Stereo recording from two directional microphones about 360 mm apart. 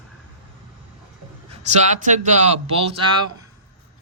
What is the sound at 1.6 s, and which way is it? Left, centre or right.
Speech, centre.